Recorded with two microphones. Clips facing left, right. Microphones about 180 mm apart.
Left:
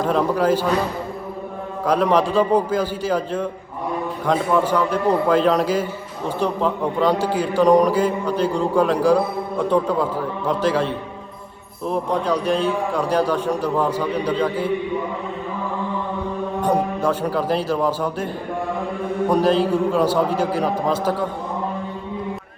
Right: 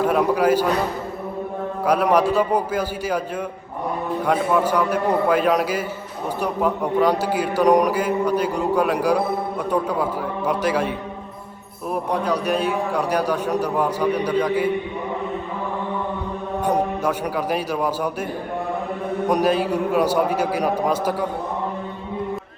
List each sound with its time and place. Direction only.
0.0 s a man's voice: 10° right (ahead or behind)
1.9 s a man's voice: 10° right (ahead or behind)
17.0 s a man's voice: 10° right (ahead or behind)
19.3 s a man's voice: 10° right (ahead or behind)